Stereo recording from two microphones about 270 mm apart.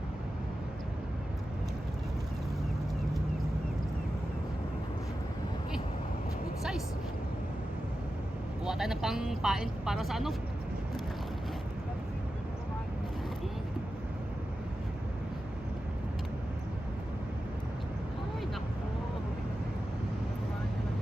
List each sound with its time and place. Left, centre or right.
6.6 s vehicle: centre
8.6 s speech: centre